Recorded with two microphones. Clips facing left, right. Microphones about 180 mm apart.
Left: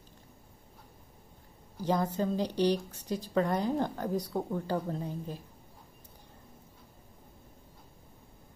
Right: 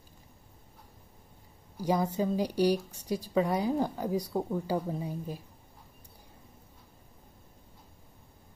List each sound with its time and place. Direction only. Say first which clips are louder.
1.8 s a woman's voice: right 1 dB; 10° right (ahead or behind)